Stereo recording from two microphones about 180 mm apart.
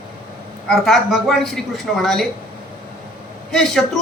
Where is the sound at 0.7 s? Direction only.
Centre (ahead or behind).